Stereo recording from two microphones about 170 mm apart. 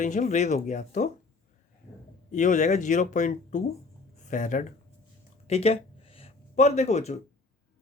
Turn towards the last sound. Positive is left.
turn(degrees=40)  # may be behind; listen again after turning